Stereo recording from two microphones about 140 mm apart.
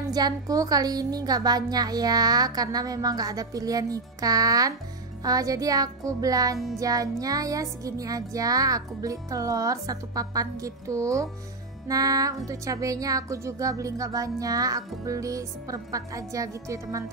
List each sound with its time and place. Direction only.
0.1 s a woman's voice: 25° right (ahead or behind)